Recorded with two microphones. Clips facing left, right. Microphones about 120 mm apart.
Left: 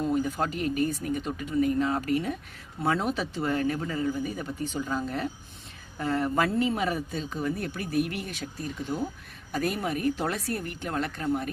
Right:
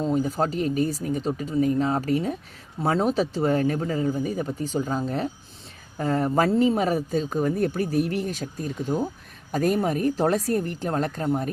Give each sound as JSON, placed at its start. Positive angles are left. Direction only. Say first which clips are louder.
{"t": 0.0, "sound": "speech", "louder": "right 3 dB", "side_deg": -35}